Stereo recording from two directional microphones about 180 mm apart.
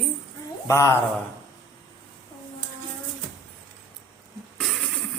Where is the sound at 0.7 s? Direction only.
15° left (ahead or behind).